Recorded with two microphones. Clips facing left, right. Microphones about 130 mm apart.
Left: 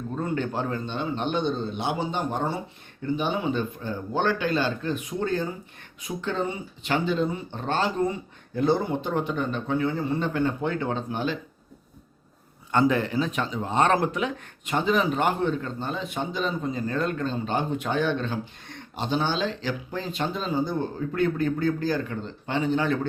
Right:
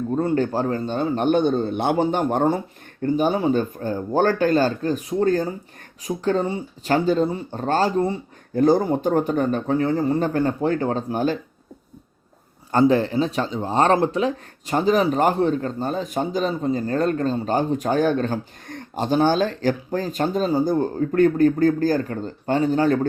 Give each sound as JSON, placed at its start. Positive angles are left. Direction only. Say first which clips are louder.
{"t": 0.2, "sound": "a man's voice", "louder": "right 6 dB", "side_deg": -35}
{"t": 3.0, "sound": "speech", "louder": "right 7 dB", "side_deg": -40}
{"t": 12.8, "sound": "speech", "louder": "right 6 dB", "side_deg": -30}